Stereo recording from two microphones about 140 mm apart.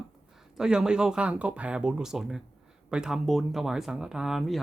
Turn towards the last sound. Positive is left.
turn(degrees=0)  # may be behind; listen again after turning